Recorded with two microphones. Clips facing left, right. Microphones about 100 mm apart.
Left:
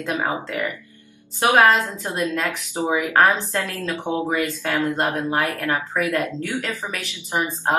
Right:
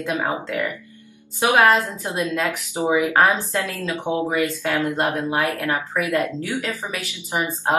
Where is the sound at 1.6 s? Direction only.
15° right (ahead or behind).